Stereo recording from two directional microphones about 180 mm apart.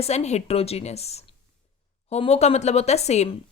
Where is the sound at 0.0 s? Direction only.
35° left (ahead or behind).